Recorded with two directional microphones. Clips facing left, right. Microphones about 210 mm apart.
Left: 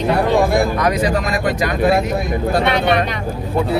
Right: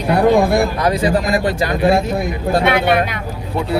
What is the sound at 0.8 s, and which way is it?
Speech, 30° right (ahead or behind).